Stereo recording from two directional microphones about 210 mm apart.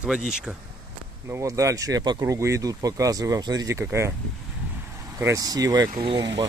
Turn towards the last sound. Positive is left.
turn(degrees=-20)  # may be behind; listen again after turning